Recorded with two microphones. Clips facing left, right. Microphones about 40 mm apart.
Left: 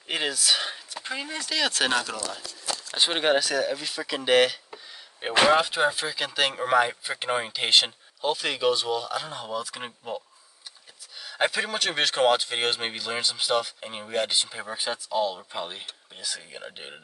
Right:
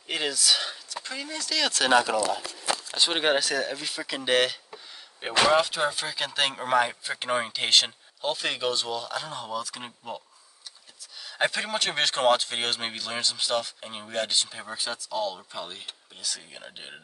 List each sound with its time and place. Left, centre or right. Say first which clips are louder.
0.1 s speech: even; centre
1.6 s speech: left 1 dB; centre
2.0 s speech: right 6 dB; right
3.1 s speech: left 2 dB; centre
5.5 s speech: left 2 dB; centre
6.0 s speech: left 1 dB; centre
11.2 s speech: left 1 dB; centre
16.2 s speech: left 2 dB; centre